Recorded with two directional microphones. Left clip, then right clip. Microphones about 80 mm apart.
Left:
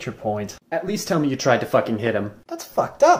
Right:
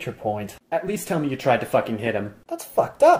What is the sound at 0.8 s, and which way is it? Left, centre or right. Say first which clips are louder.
Speech: left 3 dB; left.